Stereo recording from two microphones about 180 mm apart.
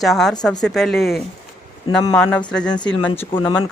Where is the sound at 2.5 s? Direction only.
5° left (ahead or behind).